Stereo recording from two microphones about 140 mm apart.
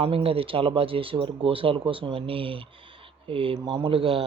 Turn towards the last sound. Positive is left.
turn(degrees=-40)  # may be behind; listen again after turning